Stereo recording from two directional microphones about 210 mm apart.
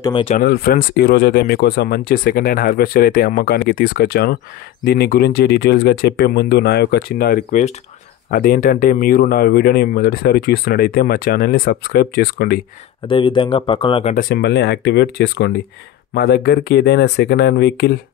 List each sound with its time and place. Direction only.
0.0 s speech: 25° left (ahead or behind)
0.4 s speech: 45° left (ahead or behind)
13.0 s speech: 25° left (ahead or behind)
14.1 s speech: 50° left (ahead or behind)